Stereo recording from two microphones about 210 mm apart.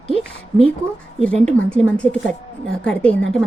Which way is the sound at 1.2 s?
5° left (ahead or behind).